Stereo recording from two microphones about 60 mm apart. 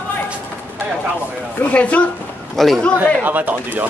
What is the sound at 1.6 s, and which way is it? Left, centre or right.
Speech, left.